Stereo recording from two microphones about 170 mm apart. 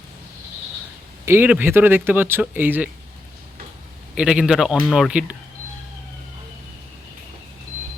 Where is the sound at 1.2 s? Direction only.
10° right (ahead or behind).